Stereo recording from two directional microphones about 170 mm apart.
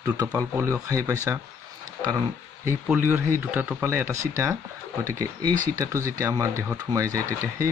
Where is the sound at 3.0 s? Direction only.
15° right (ahead or behind).